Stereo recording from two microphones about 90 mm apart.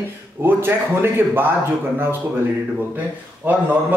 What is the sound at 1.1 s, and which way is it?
Speech, 25° right (ahead or behind).